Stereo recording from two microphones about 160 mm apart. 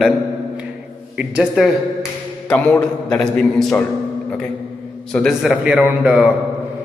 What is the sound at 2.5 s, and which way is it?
A man's voice, 5° left (ahead or behind).